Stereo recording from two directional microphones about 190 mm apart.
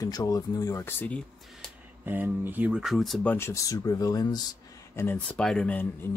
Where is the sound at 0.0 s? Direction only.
20° left (ahead or behind).